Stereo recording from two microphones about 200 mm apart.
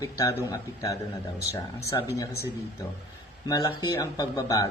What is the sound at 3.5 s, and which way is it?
Speech, 20° left (ahead or behind).